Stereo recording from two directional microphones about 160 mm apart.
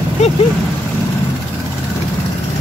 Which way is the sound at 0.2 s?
45° left (ahead or behind).